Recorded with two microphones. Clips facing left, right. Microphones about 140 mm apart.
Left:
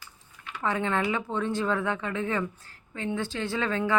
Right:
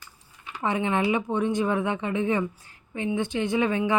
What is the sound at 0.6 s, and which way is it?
Speech, 20° right (ahead or behind).